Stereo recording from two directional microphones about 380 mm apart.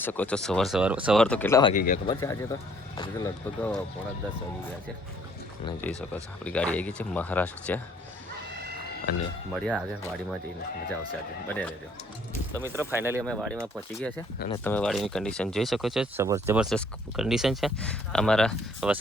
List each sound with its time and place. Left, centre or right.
0.0 s speech: centre
1.7 s speech: left
2.2 s speech: centre
5.6 s speech: centre
9.5 s speech: centre
11.4 s speech: centre